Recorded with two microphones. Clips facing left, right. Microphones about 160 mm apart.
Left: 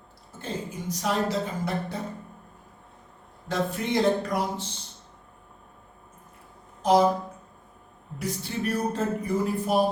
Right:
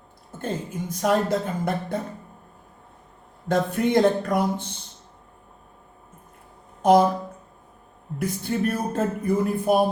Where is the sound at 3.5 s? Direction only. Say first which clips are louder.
Right 6 dB; 50° right (ahead or behind).